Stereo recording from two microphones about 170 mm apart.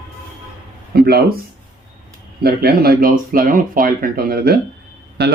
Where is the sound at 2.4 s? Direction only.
65° right (ahead or behind).